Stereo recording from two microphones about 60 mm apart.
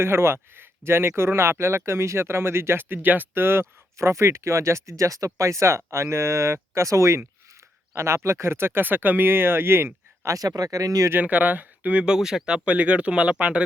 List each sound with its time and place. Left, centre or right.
0.0 s speech: right
3.4 s speech: right
10.3 s speech: right
11.2 s speech: right